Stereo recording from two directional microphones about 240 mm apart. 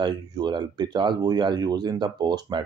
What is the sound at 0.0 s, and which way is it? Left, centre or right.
Speech, centre.